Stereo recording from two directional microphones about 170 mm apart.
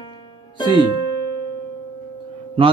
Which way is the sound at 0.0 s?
30° left (ahead or behind).